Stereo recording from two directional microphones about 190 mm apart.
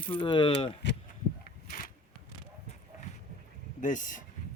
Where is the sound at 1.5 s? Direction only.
50° left (ahead or behind).